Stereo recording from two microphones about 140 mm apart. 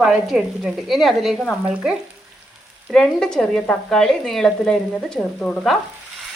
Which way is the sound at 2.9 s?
5° left (ahead or behind).